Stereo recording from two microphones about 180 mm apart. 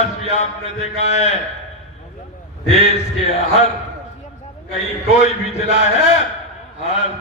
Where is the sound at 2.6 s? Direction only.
35° left (ahead or behind).